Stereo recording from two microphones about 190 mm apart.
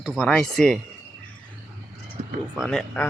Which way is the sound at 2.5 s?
Centre (ahead or behind).